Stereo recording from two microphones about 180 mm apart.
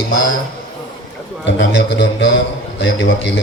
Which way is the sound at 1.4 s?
80° left.